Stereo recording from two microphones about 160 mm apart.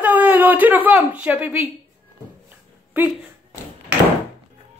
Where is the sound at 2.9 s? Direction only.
10° right (ahead or behind).